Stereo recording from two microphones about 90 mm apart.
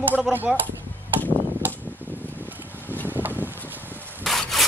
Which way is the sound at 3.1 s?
20° right (ahead or behind).